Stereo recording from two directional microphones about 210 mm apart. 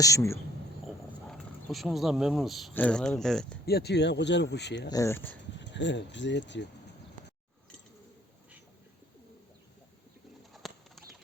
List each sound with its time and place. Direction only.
0.0 s speech: 15° left (ahead or behind)
1.3 s speech: centre (ahead or behind)
3.7 s speech: 50° left (ahead or behind)
4.9 s speech: 15° left (ahead or behind)
5.5 s speech: 60° left (ahead or behind)
10.5 s bird: centre (ahead or behind)